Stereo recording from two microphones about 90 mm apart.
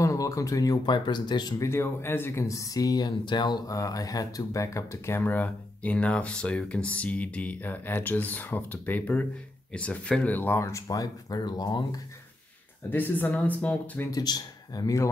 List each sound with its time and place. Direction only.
0.0 s speech: 35° left (ahead or behind)
0.8 s speech: 55° left (ahead or behind)
1.6 s speech: 30° left (ahead or behind)
3.3 s speech: 55° left (ahead or behind)
3.6 s speech: 40° left (ahead or behind)
5.2 s speech: 20° left (ahead or behind); by 12.0 s 50° left (ahead or behind)
12.9 s speech: 20° left (ahead or behind)
14.1 s a man's voice: 45° left (ahead or behind)